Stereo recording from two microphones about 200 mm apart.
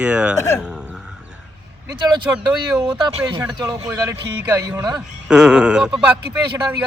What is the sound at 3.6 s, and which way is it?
Speech, 10° right (ahead or behind).